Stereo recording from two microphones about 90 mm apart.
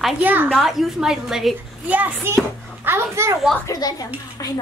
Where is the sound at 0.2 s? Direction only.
20° right (ahead or behind).